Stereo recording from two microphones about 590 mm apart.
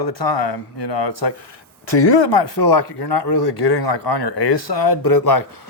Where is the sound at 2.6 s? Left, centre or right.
Left.